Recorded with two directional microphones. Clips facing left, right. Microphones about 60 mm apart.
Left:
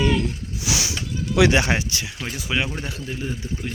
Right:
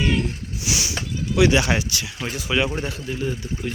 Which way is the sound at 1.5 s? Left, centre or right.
Left.